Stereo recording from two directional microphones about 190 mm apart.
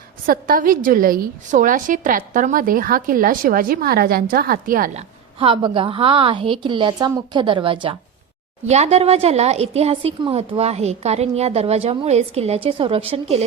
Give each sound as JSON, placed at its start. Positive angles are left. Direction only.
{"t": 0.3, "sound": "a woman's voice", "side_deg": -45}
{"t": 5.4, "sound": "a woman's voice", "side_deg": -30}